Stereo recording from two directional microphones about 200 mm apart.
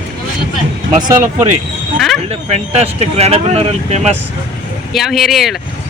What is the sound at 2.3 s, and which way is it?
Speech, 30° right (ahead or behind).